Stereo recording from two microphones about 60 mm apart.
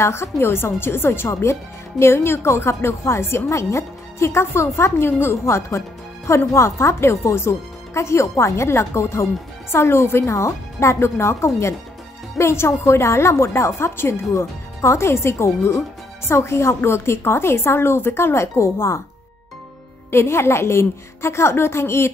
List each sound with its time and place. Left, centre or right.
0.0 s a woman's voice: left
1.3 s speech: left
20.1 s speech: left